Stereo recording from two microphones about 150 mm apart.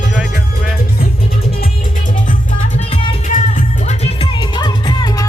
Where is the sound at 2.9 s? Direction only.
35° left (ahead or behind).